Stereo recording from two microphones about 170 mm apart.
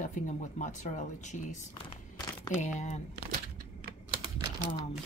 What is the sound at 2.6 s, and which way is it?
Speech, 45° left (ahead or behind).